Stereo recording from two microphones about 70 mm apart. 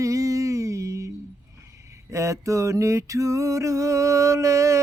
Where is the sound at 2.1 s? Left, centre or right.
Right.